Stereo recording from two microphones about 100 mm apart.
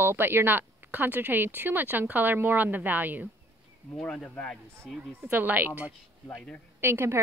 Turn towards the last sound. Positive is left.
turn(degrees=-25)  # may be behind; listen again after turning